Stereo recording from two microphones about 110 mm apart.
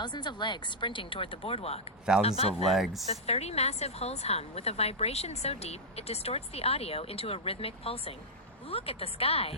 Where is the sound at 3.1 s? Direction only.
75° left (ahead or behind).